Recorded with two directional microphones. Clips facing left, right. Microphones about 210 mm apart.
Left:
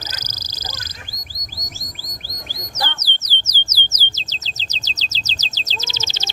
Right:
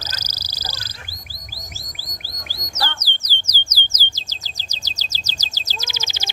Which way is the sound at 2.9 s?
10° right (ahead or behind).